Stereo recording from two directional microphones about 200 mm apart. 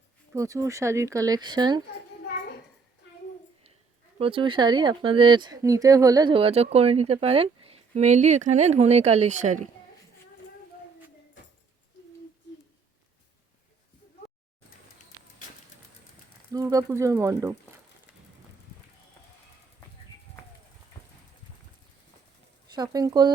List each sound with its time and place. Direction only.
0.3 s speech: 15° right (ahead or behind)
4.2 s speech: 25° right (ahead or behind)
16.5 s speech: 15° right (ahead or behind)
22.7 s speech: 20° right (ahead or behind)